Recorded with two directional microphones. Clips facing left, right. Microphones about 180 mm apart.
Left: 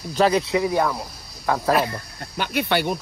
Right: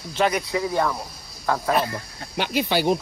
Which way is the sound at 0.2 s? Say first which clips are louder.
Left 4 dB; 25° left (ahead or behind).